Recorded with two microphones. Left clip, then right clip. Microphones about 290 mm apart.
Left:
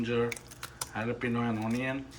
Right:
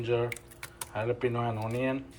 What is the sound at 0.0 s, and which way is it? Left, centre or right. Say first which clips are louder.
Speech: right 1 dB; centre.